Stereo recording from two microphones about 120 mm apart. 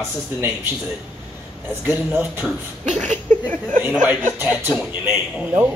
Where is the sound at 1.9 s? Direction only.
10° right (ahead or behind).